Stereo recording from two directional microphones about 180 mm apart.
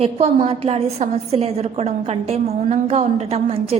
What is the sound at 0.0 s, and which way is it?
A woman's voice, 35° right (ahead or behind).